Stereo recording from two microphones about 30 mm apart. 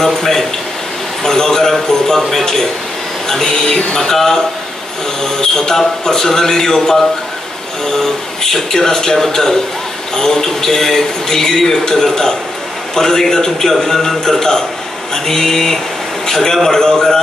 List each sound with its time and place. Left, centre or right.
0.0 s a man's voice: centre
16.3 s a sound: centre
16.6 s a man's voice: centre